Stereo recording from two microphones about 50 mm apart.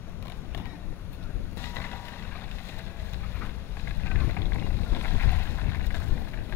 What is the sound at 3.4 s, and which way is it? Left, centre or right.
Boat, left.